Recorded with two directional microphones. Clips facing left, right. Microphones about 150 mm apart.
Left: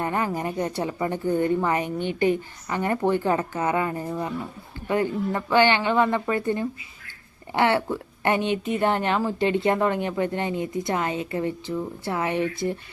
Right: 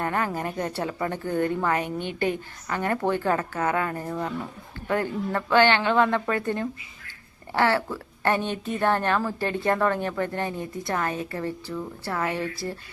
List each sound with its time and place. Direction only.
0.0 s a woman's voice: 15° left (ahead or behind)